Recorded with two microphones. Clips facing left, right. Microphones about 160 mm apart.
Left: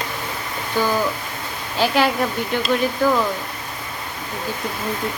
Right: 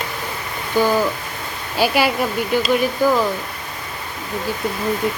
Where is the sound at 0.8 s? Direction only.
15° right (ahead or behind).